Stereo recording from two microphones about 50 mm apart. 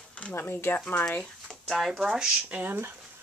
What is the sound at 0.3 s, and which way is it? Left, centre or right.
Speech, left.